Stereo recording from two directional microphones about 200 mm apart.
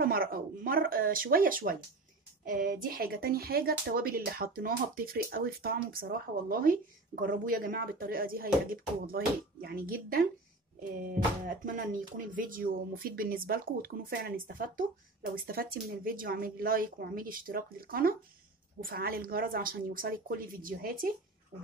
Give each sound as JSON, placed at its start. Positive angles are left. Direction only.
{"t": 0.0, "sound": "speech", "side_deg": -45}